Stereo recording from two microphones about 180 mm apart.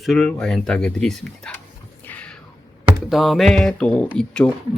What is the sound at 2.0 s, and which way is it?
Music, 10° left (ahead or behind).